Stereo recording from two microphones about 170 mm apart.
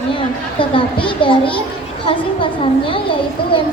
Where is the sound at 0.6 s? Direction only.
30° left (ahead or behind).